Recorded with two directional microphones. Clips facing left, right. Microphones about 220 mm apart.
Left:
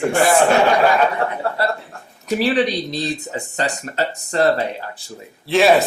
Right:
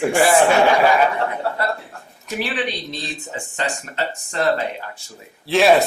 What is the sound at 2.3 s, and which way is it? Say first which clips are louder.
Speech: left 7 dB; 35° left (ahead or behind).